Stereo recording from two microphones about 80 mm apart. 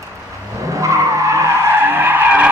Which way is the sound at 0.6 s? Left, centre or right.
Right.